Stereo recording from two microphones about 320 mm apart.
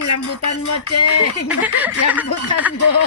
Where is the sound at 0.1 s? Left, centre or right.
Left.